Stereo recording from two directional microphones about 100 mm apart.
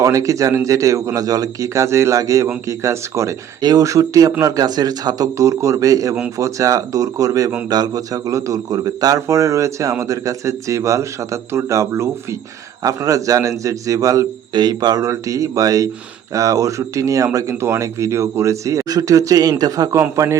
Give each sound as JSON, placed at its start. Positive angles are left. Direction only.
{"t": 0.0, "sound": "speech", "side_deg": -35}
{"t": 14.5, "sound": "a man's voice", "side_deg": -45}